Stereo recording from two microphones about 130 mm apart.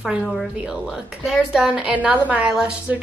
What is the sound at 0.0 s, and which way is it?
A woman's voice, 5° right (ahead or behind).